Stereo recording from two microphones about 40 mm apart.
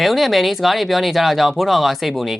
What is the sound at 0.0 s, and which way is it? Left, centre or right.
Speech, centre.